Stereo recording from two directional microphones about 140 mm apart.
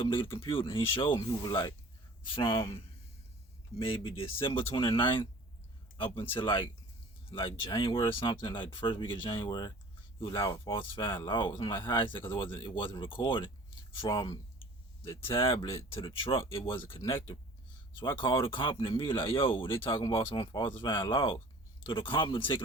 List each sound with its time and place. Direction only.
0.3 s speech: 40° left (ahead or behind)
6.4 s speech: 35° left (ahead or behind)